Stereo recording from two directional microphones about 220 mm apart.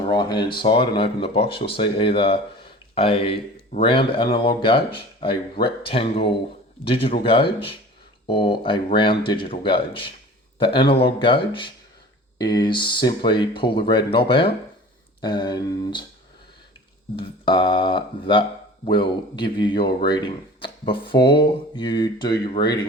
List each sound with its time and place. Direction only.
0.1 s speech: 20° left (ahead or behind)
17.2 s speech: 20° left (ahead or behind)